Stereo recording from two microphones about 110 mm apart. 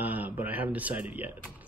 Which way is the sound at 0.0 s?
15° right (ahead or behind).